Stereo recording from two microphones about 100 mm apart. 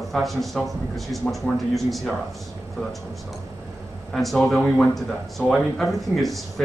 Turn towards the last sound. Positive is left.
turn(degrees=0)  # may be behind; listen again after turning